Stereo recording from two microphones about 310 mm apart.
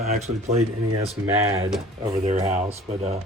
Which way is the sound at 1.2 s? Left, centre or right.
Centre.